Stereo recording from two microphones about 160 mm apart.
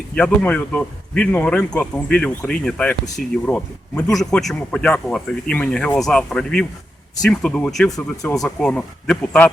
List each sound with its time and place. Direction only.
0.2 s a man's voice: 5° left (ahead or behind)
7.9 s speech: 20° left (ahead or behind)
8.3 s a man's voice: 5° left (ahead or behind)